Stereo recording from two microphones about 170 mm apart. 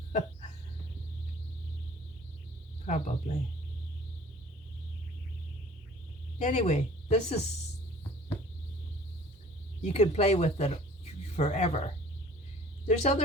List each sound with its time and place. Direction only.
2.8 s speech: 40° left (ahead or behind)
6.4 s speech: 45° left (ahead or behind)
9.8 s speech: 40° left (ahead or behind)
12.9 s speech: 40° left (ahead or behind)